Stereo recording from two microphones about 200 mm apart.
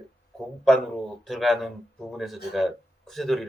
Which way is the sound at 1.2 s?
Centre (ahead or behind).